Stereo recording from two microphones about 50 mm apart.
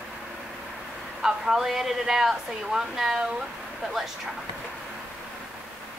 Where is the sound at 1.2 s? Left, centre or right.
Centre.